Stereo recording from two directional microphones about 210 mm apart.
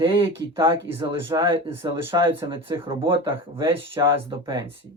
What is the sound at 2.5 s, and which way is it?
Speech, 25° right (ahead or behind).